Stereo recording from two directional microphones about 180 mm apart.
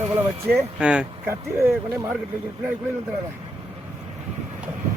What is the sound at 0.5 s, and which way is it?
Speech, 5° right (ahead or behind).